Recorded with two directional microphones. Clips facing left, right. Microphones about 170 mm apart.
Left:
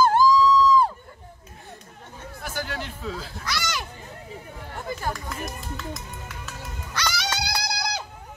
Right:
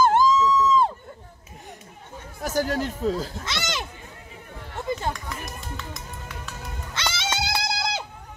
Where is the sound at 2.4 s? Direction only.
40° right (ahead or behind).